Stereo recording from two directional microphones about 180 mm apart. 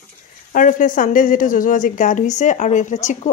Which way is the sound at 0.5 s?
45° left (ahead or behind).